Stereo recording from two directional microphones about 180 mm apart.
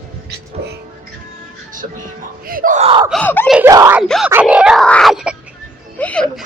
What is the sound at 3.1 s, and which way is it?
Screaming, 5° left (ahead or behind).